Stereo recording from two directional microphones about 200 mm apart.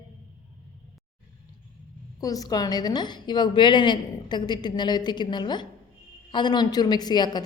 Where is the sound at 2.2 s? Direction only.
20° left (ahead or behind).